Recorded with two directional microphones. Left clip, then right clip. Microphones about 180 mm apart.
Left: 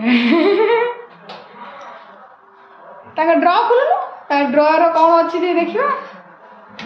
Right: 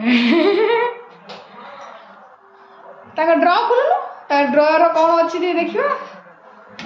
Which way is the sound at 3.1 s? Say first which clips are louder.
Left 1 dB; centre (ahead or behind).